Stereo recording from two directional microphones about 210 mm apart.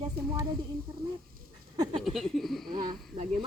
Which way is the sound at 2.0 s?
Centre (ahead or behind).